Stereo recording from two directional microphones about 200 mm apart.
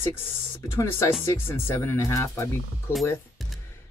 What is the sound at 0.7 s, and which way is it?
Speech, 10° left (ahead or behind).